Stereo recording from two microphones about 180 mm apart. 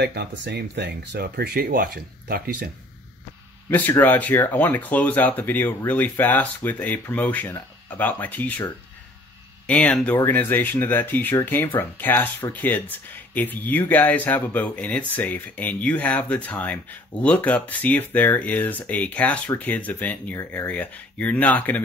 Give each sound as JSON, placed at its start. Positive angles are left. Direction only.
{"t": 0.0, "sound": "speech", "side_deg": -65}
{"t": 3.7, "sound": "speech", "side_deg": 10}
{"t": 9.7, "sound": "speech", "side_deg": 5}